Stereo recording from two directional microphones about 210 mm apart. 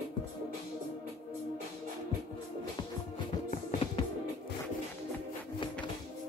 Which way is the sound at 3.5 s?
35° left (ahead or behind).